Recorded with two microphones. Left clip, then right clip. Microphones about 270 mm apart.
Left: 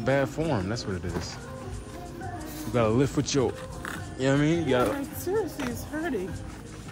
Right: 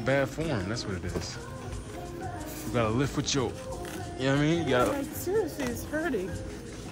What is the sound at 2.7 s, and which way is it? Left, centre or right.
Speech, centre.